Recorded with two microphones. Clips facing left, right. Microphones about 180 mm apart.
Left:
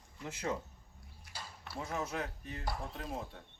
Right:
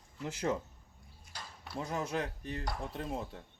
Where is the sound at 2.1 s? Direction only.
30° right (ahead or behind).